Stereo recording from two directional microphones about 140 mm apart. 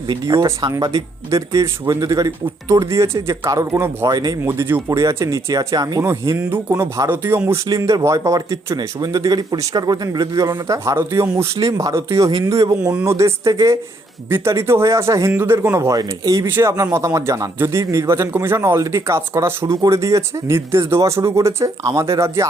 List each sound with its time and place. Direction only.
0.1 s speech: 25° right (ahead or behind)
4.1 s speech: 30° right (ahead or behind)
4.4 s speech: 15° right (ahead or behind)
12.9 s speech: 15° right (ahead or behind)